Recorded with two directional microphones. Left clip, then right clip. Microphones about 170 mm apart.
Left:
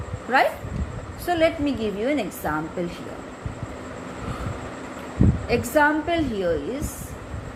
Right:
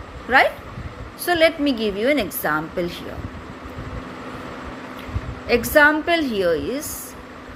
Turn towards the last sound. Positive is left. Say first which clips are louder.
# right 4 dB
turn(degrees=-30)  # may be behind; listen again after turning